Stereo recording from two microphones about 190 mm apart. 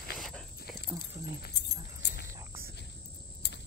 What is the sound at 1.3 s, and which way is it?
Dog, 60° left (ahead or behind).